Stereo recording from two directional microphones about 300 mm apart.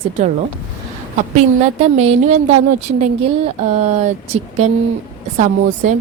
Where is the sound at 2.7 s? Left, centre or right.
Right.